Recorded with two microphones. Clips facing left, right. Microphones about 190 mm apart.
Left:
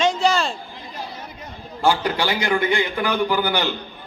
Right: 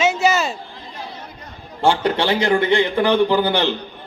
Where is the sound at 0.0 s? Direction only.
5° right (ahead or behind).